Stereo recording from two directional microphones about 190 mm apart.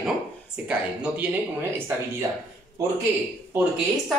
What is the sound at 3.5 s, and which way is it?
Speech, 10° right (ahead or behind).